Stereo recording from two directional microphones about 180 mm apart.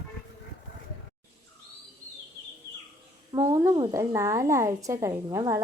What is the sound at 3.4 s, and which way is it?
A woman's voice, 20° right (ahead or behind).